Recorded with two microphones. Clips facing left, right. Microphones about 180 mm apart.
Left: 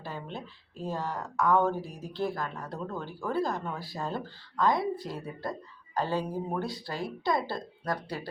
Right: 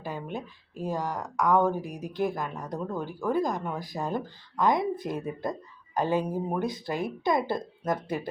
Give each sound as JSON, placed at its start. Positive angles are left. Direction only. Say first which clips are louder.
{"t": 0.0, "sound": "a woman's voice", "louder": "right 4 dB", "side_deg": -15}